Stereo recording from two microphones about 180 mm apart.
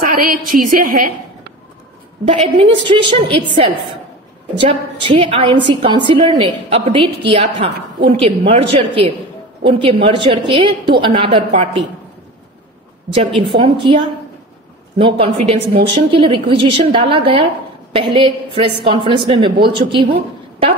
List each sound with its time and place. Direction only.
0.1 s a woman's voice: 50° right (ahead or behind)
2.2 s a woman's voice: 30° right (ahead or behind)
4.6 s a woman's voice: 30° right (ahead or behind)
13.4 s a woman's voice: 30° right (ahead or behind)
15.0 s a woman's voice: 30° right (ahead or behind)